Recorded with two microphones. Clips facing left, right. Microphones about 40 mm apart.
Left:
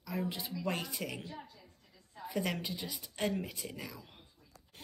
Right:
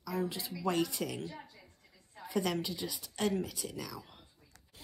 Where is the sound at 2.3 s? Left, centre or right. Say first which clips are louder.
Right 3 dB; centre.